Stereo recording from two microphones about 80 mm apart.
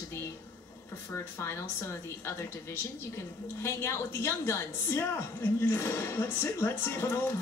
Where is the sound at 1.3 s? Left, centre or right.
Left.